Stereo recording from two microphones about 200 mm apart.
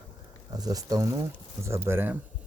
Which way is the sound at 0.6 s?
20° right (ahead or behind).